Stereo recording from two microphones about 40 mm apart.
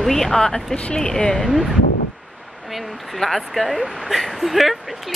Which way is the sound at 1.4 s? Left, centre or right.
Centre.